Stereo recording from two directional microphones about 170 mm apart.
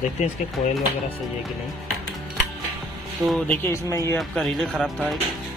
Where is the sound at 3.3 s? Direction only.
5° left (ahead or behind).